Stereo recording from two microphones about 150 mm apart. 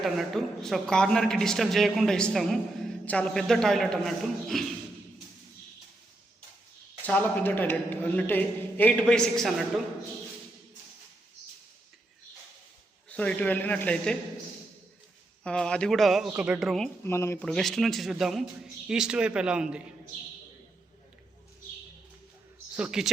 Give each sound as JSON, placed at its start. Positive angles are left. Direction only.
{"t": 0.0, "sound": "a woman's voice", "side_deg": 0}
{"t": 7.0, "sound": "a man's voice", "side_deg": 10}
{"t": 13.1, "sound": "a man's voice", "side_deg": 10}
{"t": 15.4, "sound": "a woman's voice", "side_deg": 5}
{"t": 17.0, "sound": "a man's voice", "side_deg": 15}
{"t": 17.4, "sound": "a woman's voice", "side_deg": 5}
{"t": 22.7, "sound": "speech", "side_deg": -5}